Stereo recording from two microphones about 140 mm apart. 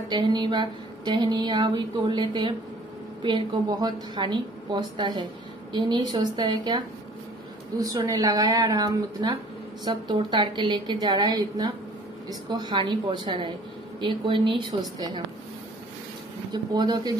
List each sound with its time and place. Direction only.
0.1 s a woman's voice: 30° right (ahead or behind)
16.5 s speech: 30° right (ahead or behind)